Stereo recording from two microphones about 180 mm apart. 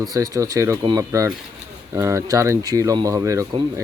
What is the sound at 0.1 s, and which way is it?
Speech, 20° right (ahead or behind).